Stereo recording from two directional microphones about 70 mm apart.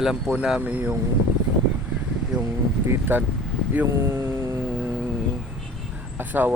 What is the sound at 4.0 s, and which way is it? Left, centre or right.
Vehicle, right.